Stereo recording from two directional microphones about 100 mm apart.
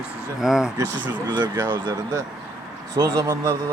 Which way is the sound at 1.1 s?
50° right (ahead or behind).